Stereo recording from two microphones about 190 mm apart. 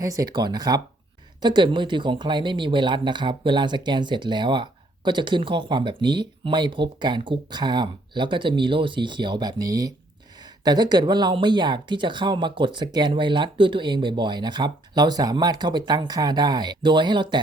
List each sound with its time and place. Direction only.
0.0 s speech: 20° right (ahead or behind)